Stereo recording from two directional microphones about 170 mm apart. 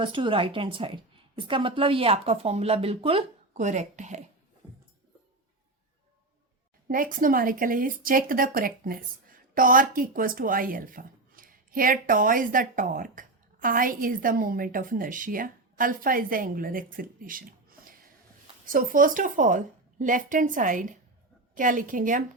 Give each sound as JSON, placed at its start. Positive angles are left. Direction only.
{"t": 0.0, "sound": "speech", "side_deg": -30}
{"t": 6.8, "sound": "a woman's voice", "side_deg": -55}